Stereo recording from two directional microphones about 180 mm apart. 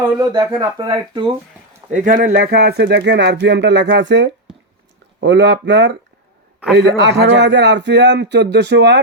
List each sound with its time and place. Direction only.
0.2 s speech: 20° right (ahead or behind)
1.9 s speech: 45° right (ahead or behind); by 9.0 s 70° right (ahead or behind)